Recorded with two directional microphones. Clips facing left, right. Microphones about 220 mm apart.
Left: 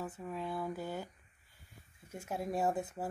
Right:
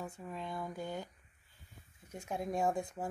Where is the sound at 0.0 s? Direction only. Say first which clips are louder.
Left 3 dB; 5° left (ahead or behind).